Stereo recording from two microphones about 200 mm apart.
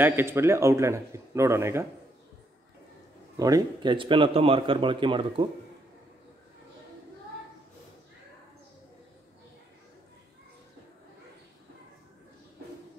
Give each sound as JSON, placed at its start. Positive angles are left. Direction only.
{"t": 0.0, "sound": "speech", "side_deg": -10}
{"t": 3.3, "sound": "a man's voice", "side_deg": -20}